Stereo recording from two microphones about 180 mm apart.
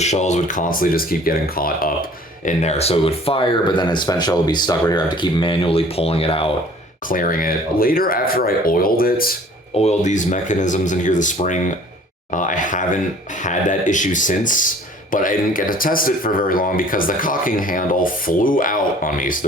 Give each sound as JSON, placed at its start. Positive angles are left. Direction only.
{"t": 0.0, "sound": "speech", "side_deg": 40}
{"t": 2.4, "sound": "speech", "side_deg": 40}
{"t": 7.1, "sound": "speech", "side_deg": 50}
{"t": 9.7, "sound": "speech", "side_deg": 40}